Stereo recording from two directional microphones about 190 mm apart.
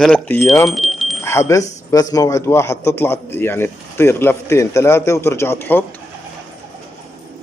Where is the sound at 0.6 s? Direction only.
Centre (ahead or behind).